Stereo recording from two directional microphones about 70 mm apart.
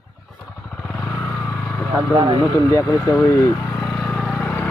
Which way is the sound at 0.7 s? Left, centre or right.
Centre.